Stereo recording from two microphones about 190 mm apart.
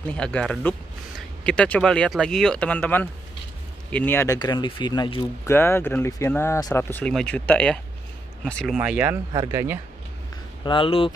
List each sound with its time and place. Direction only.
0.1 s speech: 5° left (ahead or behind); by 5.2 s 25° left (ahead or behind)
5.5 s speech: 10° left (ahead or behind)
8.7 s speech: 5° right (ahead or behind)
10.6 s speech: 25° left (ahead or behind)